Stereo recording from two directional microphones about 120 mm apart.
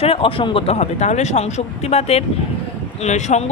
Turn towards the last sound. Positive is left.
turn(degrees=75)  # may be behind; listen again after turning